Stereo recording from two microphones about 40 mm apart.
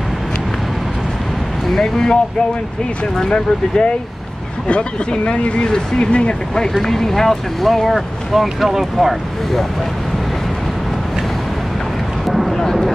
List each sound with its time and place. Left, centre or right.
1.8 s speech: centre
3.3 s speech: left
6.8 s speech: centre
12.3 s a sound: centre